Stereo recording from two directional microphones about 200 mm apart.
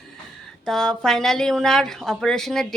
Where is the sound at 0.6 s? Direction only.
Centre (ahead or behind).